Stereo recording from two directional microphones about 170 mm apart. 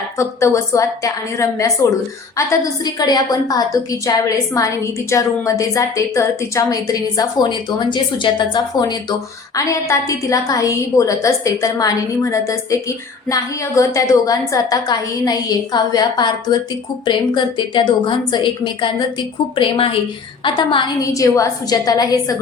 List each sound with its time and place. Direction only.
0.2 s a woman's voice: 15° left (ahead or behind)